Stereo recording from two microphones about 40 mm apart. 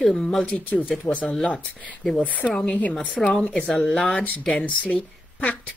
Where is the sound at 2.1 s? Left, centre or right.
Left.